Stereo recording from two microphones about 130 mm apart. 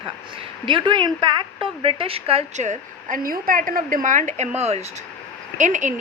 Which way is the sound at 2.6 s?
80° right.